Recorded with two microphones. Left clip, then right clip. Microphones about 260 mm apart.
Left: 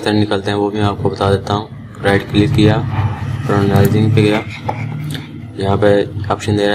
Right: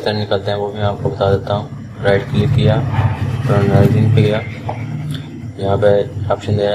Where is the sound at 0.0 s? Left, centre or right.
Left.